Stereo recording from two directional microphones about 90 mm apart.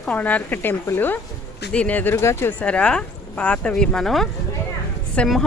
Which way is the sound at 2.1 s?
30° left (ahead or behind).